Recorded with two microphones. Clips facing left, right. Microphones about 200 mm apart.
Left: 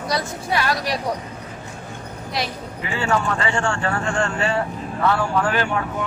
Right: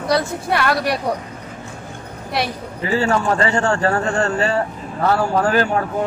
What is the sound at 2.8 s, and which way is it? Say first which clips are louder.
A man's voice: right 4 dB; 40° right (ahead or behind).